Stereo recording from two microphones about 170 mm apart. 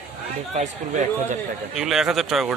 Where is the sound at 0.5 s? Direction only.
45° right (ahead or behind).